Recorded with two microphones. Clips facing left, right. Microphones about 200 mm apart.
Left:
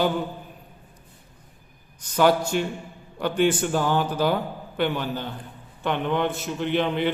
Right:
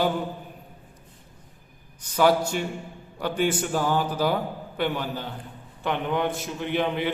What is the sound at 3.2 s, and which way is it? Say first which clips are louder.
Speech: left 3 dB; 5° right (ahead or behind).